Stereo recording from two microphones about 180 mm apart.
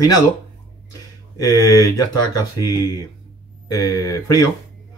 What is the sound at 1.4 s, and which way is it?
Speech, 20° left (ahead or behind).